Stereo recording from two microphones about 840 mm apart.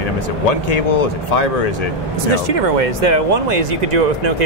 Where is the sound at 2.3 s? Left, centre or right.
Right.